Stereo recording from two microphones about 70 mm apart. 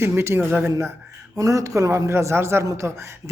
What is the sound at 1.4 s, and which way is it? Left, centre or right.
A man's voice, right.